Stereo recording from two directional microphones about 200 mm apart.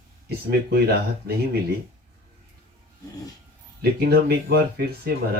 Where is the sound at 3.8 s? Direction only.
50° right (ahead or behind).